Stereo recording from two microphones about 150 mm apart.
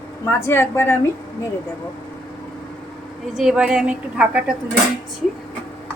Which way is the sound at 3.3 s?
5° right (ahead or behind).